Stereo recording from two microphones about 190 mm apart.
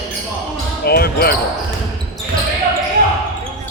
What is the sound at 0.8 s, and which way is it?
Basketball bounce, 55° left (ahead or behind).